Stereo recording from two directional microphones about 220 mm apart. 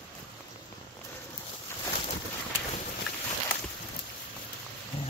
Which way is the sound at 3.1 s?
Centre (ahead or behind).